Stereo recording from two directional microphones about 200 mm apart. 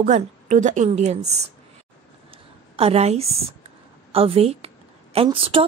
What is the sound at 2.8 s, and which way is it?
A woman's voice, 30° right (ahead or behind).